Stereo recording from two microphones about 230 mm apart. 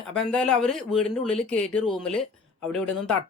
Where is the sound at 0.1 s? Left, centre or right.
Centre.